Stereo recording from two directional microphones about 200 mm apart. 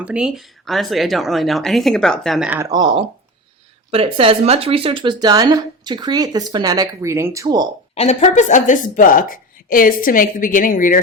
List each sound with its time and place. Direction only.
0.0 s a woman's voice: 5° right (ahead or behind)
2.5 s speech: 15° right (ahead or behind)
7.9 s a woman's voice: 35° left (ahead or behind)